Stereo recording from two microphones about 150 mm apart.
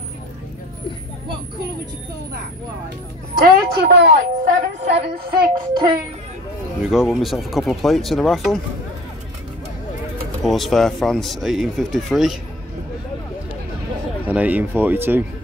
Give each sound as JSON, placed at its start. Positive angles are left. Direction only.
{"t": 3.3, "sound": "a woman's voice", "side_deg": -85}
{"t": 6.8, "sound": "speech", "side_deg": 0}
{"t": 10.4, "sound": "speech", "side_deg": 0}
{"t": 14.2, "sound": "speech", "side_deg": -10}